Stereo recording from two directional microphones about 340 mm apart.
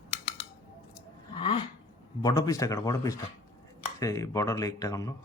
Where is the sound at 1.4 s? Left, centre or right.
Centre.